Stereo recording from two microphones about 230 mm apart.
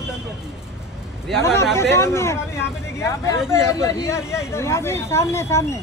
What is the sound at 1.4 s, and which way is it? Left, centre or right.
Speech, centre.